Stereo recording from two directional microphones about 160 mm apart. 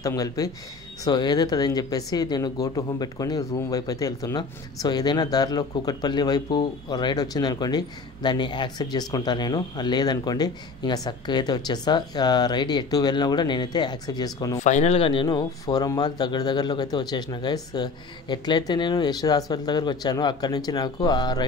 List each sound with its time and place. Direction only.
0.0 s speech: 20° left (ahead or behind)
14.6 s speech: 45° left (ahead or behind); by 21.5 s 25° left (ahead or behind)